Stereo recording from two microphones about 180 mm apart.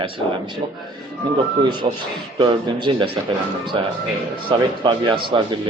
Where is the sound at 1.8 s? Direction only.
35° right (ahead or behind).